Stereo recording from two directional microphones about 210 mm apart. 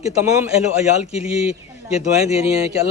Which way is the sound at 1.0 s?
5° right (ahead or behind).